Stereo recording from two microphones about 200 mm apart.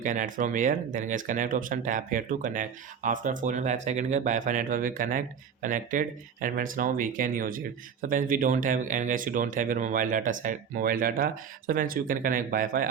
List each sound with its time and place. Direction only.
0.0 s speech: 40° right (ahead or behind)